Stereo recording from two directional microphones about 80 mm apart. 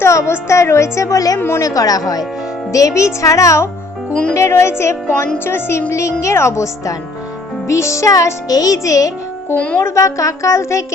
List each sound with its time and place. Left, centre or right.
0.0 s a woman's voice: left
1.4 s a woman's voice: left
1.6 s music: left
2.7 s a woman's voice: left
4.1 s music: centre
4.4 s a woman's voice: left
7.7 s music: left
9.6 s music: centre
9.8 s a woman's voice: left